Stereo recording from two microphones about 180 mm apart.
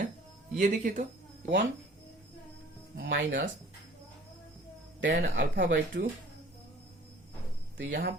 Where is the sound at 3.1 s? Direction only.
85° right.